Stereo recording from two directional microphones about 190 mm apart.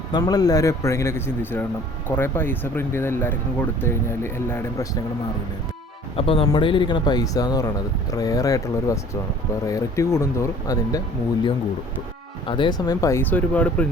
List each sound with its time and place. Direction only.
0.1 s speech: 20° left (ahead or behind)
6.1 s speech: 30° left (ahead or behind)
12.5 s speech: 25° left (ahead or behind); by 13.8 s 5° left (ahead or behind)